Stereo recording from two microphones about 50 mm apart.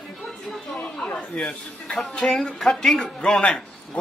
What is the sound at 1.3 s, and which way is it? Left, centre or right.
Speech, centre.